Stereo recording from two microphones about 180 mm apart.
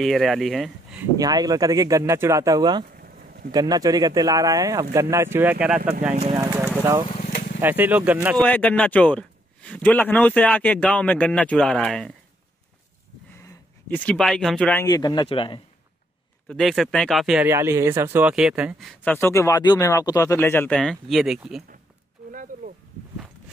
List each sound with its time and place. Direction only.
0.0 s speech: centre (ahead or behind)
1.1 s speech: 20° right (ahead or behind)
3.0 s a sound: 55° right (ahead or behind)
3.5 s speech: 20° right (ahead or behind)
6.3 s horse: 15° right (ahead or behind)
6.8 s speech: 15° right (ahead or behind)
7.1 s vehicle: 40° left (ahead or behind)
7.6 s speech: 10° right (ahead or behind)
8.4 s a man's voice: 5° left (ahead or behind)
13.4 s speech: 10° left (ahead or behind); by 15.6 s 30° left (ahead or behind)
16.4 s speech: centre (ahead or behind)
17.5 s speech: 15° right (ahead or behind)
19.1 s a man's voice: 15° left (ahead or behind); by 21.6 s 5° right (ahead or behind)